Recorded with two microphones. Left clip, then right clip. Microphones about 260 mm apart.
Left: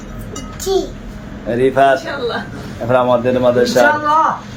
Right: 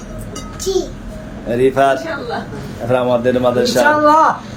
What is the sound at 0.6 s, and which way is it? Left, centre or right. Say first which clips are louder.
A child's voice: left 1 dB; centre.